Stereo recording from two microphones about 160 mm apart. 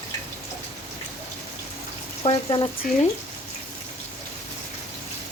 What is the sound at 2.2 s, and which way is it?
Speech, 30° left (ahead or behind).